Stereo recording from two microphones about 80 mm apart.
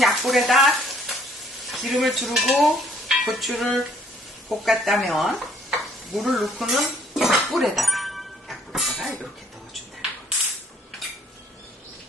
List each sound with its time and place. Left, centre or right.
0.0 s frying: centre
1.7 s dishes: centre
4.4 s speech: centre
6.1 s chink: centre